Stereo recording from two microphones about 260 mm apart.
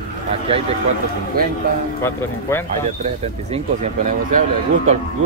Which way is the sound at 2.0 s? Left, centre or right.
Centre.